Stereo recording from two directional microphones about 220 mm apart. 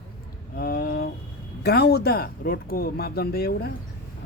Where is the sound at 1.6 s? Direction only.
45° left (ahead or behind).